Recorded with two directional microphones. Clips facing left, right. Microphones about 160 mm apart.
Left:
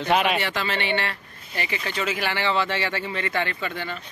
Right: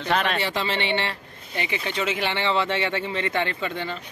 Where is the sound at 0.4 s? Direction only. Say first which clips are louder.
Right 1 dB; 30° right (ahead or behind).